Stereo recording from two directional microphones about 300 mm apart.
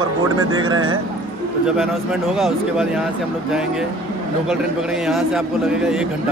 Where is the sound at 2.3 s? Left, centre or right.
Centre.